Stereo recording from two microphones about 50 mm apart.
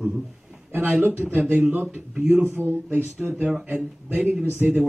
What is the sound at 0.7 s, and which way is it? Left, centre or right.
Speech, right.